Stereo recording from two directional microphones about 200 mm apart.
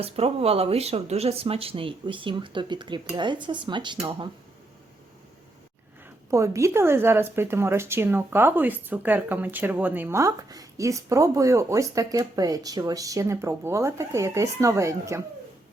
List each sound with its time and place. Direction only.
0.0 s speech: 30° right (ahead or behind)
6.3 s speech: 15° right (ahead or behind)